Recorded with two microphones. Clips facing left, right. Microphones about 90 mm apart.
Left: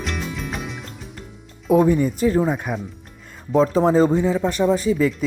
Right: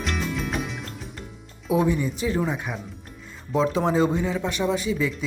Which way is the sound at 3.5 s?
40° left (ahead or behind).